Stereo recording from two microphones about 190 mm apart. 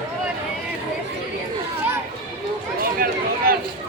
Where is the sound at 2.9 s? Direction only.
50° right (ahead or behind).